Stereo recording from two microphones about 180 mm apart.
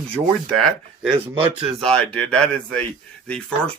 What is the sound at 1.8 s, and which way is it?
Speech, 5° left (ahead or behind).